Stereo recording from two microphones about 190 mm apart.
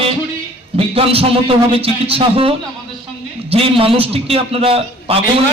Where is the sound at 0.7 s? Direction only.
30° right (ahead or behind).